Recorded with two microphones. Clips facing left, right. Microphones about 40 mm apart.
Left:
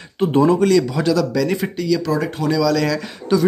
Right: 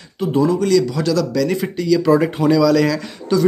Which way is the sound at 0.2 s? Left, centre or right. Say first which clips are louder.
Left 2 dB; left.